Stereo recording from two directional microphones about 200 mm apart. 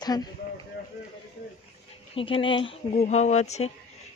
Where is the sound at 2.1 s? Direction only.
25° left (ahead or behind).